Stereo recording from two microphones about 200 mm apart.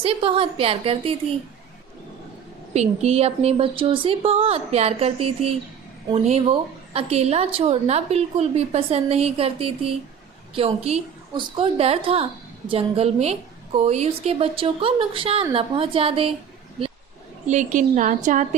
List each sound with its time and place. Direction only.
0.0 s a woman's voice: 25° right (ahead or behind)
2.7 s a woman's voice: 35° right (ahead or behind)
17.4 s a woman's voice: 35° right (ahead or behind)